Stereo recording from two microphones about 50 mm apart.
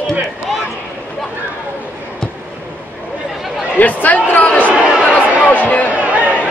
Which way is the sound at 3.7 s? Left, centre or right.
Left.